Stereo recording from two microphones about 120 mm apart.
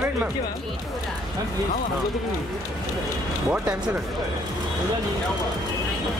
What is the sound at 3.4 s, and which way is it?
Speech, 10° right (ahead or behind).